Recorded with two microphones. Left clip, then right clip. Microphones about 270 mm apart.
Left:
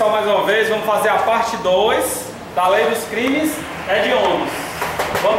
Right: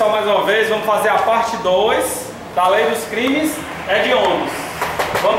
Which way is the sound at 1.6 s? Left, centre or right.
Right.